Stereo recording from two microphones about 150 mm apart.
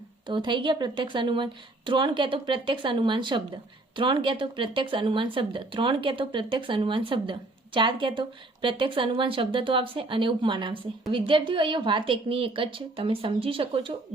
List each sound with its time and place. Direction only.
0.3 s a woman's voice: 30° right (ahead or behind)